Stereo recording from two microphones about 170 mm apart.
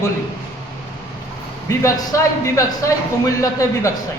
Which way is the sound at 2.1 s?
20° left (ahead or behind).